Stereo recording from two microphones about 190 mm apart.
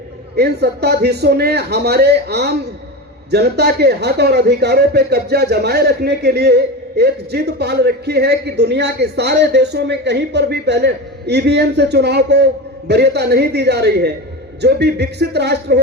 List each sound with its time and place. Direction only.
0.3 s speech: 60° right (ahead or behind)